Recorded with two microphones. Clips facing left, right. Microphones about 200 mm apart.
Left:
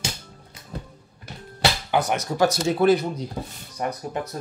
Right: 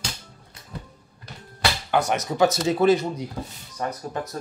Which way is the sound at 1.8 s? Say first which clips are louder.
Right 4 dB; 5° left (ahead or behind).